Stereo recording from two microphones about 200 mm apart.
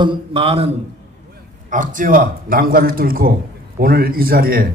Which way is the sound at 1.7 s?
40° right (ahead or behind).